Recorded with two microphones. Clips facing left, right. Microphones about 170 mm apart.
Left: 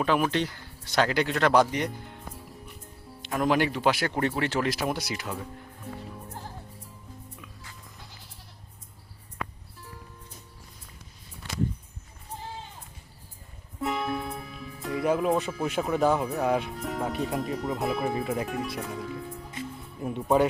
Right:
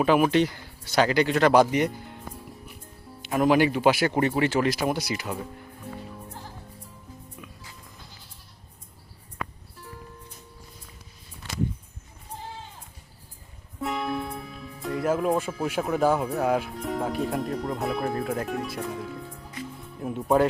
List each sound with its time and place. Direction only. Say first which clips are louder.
0.0 s speech: right 5 dB; 10° right (ahead or behind)
3.2 s speech: right 4 dB; 5° right (ahead or behind)
13.8 s speech: right 1 dB; centre (ahead or behind)
19.6 s music: right 1 dB; 25° left (ahead or behind)
20.0 s speech: right 1 dB; centre (ahead or behind)